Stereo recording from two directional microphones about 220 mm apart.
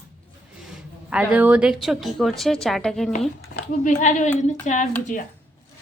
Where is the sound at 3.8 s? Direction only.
35° left (ahead or behind).